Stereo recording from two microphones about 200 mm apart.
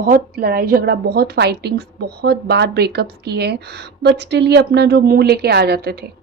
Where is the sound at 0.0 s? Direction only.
45° right (ahead or behind).